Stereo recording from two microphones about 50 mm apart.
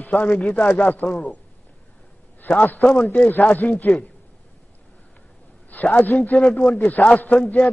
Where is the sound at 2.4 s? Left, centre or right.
Left.